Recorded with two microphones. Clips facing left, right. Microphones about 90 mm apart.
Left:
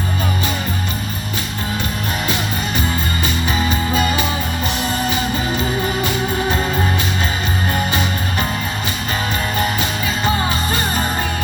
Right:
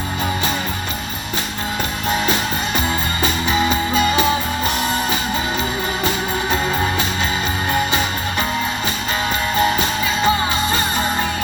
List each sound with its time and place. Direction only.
2.2 s music: 35° right (ahead or behind)
10.2 s music: 30° right (ahead or behind)